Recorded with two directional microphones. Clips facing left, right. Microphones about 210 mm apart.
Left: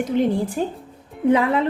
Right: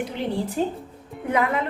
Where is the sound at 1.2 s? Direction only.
30° left (ahead or behind).